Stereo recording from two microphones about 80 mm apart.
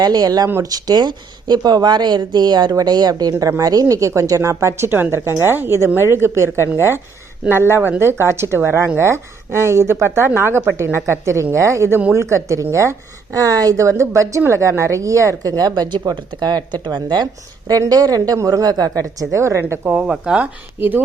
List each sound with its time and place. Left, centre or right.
0.0 s speech: right
3.3 s a woman's voice: right
3.6 s a woman's voice: right
17.7 s a woman's voice: right
20.0 s speech: centre
20.7 s speech: right